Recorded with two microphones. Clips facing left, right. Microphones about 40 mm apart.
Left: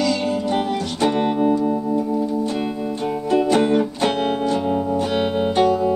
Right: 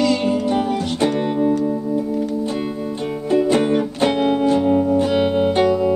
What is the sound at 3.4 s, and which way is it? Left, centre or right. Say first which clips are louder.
Music: even; right.